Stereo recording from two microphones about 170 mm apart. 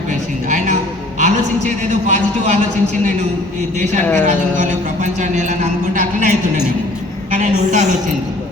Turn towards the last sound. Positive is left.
turn(degrees=-45)  # may be behind; listen again after turning